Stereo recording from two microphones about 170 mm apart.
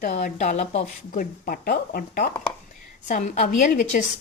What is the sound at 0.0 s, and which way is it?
Speech, 55° left (ahead or behind).